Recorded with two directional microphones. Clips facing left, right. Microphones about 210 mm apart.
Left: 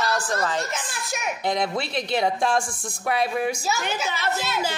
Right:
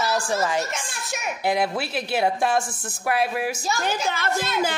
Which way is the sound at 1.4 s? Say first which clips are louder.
Right 2 dB; 5° right (ahead or behind).